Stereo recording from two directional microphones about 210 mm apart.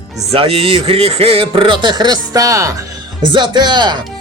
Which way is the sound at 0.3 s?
25° right (ahead or behind).